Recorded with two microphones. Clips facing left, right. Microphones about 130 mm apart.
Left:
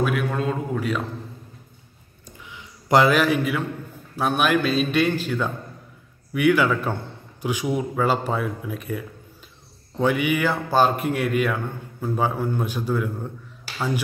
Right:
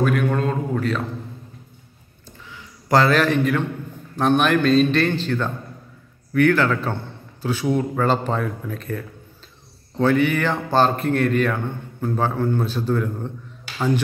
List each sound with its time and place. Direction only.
0.0 s a man's voice: 5° left (ahead or behind)
2.2 s a sound: 15° left (ahead or behind)
4.2 s a man's voice: 5° left (ahead or behind)